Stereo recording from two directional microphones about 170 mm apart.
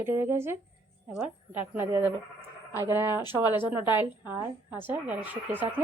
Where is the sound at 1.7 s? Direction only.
15° right (ahead or behind).